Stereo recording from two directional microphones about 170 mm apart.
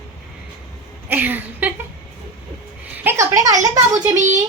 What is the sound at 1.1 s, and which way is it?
Speech, 10° right (ahead or behind).